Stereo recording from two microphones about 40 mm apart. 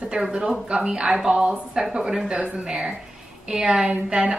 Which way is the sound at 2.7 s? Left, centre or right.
Centre.